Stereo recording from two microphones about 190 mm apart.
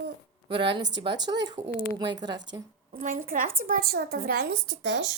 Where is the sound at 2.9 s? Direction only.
45° right (ahead or behind); by 5.1 s 65° right (ahead or behind).